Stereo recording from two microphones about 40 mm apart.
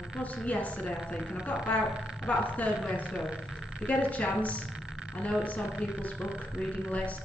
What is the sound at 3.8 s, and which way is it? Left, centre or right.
A woman's voice, left.